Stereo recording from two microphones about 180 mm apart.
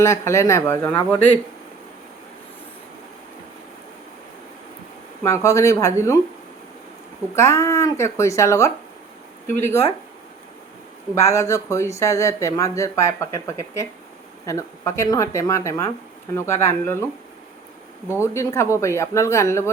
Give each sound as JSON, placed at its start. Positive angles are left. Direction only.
{"t": 0.0, "sound": "speech", "side_deg": 15}
{"t": 5.2, "sound": "speech", "side_deg": 15}
{"t": 7.3, "sound": "speech", "side_deg": 15}
{"t": 11.1, "sound": "speech", "side_deg": 15}
{"t": 18.2, "sound": "speech", "side_deg": 15}